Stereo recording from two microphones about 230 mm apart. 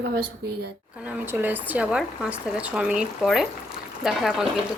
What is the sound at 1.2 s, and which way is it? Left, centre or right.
Speech, centre.